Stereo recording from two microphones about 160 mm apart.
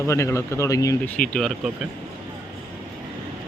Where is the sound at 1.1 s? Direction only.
5° left (ahead or behind).